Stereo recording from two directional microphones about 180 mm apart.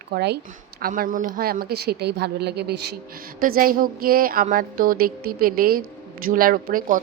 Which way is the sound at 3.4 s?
50° right (ahead or behind).